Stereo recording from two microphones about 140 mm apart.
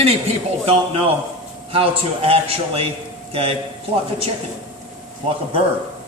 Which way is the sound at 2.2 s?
45° right (ahead or behind).